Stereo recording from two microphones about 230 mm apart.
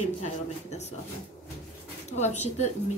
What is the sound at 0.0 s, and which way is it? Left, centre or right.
Speech, left.